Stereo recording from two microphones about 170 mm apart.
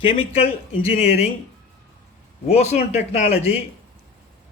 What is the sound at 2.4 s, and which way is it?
Speech, 40° left (ahead or behind).